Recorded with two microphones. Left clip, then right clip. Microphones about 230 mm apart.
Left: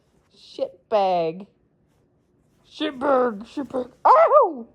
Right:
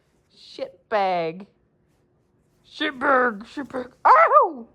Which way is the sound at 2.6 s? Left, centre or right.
Centre.